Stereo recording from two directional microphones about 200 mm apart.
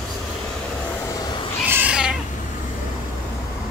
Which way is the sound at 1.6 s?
10° right (ahead or behind).